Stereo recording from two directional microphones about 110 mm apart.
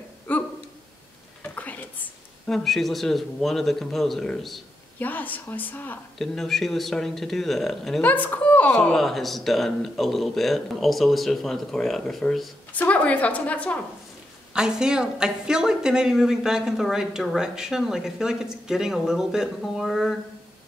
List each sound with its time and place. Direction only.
0.3 s a sound: 15° left (ahead or behind)
2.5 s speech: centre (ahead or behind)
4.9 s a woman's voice: 15° left (ahead or behind)
6.1 s speech: 5° left (ahead or behind)
8.0 s a woman's voice: 15° left (ahead or behind)
8.7 s speech: 5° left (ahead or behind)
12.7 s a woman's voice: 15° left (ahead or behind)
14.5 s speech: 5° right (ahead or behind)